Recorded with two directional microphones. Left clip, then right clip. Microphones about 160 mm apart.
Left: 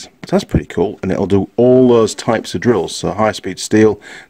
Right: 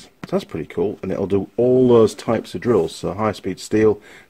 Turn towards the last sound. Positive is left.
turn(degrees=45)  # may be behind; listen again after turning